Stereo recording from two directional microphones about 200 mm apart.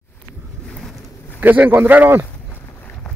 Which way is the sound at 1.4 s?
10° right (ahead or behind).